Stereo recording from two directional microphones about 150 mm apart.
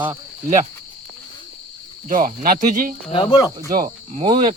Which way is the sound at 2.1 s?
65° right (ahead or behind).